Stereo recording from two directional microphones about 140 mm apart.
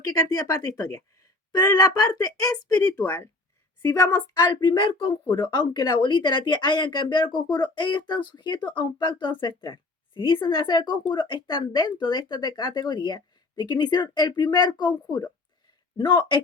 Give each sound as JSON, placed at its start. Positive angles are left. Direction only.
{"t": 0.1, "sound": "speech", "side_deg": 25}